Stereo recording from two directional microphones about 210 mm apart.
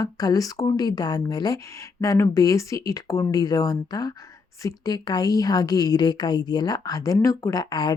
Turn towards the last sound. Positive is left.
turn(degrees=20)  # may be behind; listen again after turning